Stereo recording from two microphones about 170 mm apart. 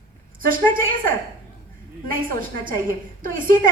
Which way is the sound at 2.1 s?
55° right (ahead or behind).